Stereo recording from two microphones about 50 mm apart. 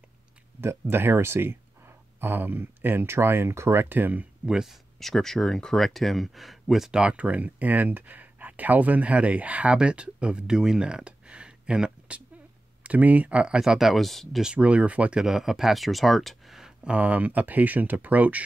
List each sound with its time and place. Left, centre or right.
0.6 s speech: right
4.5 s speech: centre
5.0 s speech: centre
7.0 s speech: right
12.8 s speech: right
13.6 s speech: centre
14.6 s speech: right
15.1 s speech: centre
16.8 s speech: right